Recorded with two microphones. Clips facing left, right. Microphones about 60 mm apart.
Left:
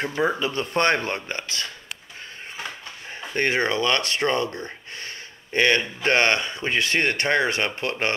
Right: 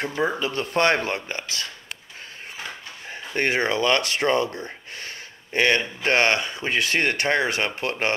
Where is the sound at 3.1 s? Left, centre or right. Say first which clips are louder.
Even; centre.